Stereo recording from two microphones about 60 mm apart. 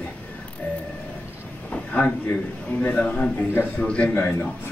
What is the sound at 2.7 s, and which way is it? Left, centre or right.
Speech, left.